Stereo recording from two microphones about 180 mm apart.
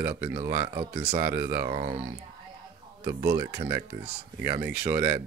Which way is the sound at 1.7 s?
35° right (ahead or behind).